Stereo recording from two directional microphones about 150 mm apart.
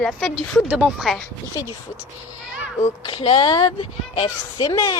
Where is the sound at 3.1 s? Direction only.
35° left (ahead or behind).